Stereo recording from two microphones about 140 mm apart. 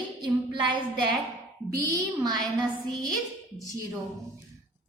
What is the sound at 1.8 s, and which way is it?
Speech, 25° right (ahead or behind).